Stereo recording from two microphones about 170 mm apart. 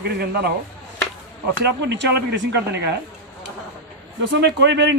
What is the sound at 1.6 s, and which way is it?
Speech, 85° right.